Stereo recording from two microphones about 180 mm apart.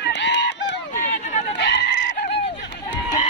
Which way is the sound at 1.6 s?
75° left (ahead or behind).